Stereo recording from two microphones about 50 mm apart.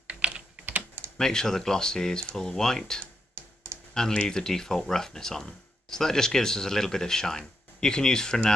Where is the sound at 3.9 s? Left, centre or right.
Centre.